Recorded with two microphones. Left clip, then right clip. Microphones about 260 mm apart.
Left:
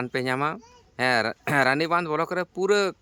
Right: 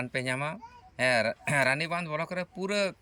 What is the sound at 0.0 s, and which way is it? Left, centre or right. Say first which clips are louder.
Speech: left 6 dB; centre.